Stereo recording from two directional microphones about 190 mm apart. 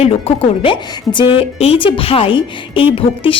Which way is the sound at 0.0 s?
30° left (ahead or behind).